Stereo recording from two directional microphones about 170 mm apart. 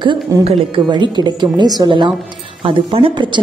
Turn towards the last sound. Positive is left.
turn(degrees=-30)  # may be behind; listen again after turning